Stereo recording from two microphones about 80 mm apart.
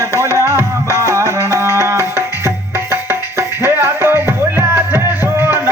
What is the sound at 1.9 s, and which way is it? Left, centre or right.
Music, right.